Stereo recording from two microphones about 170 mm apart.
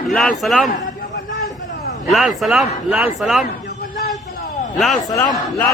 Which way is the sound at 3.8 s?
60° left (ahead or behind).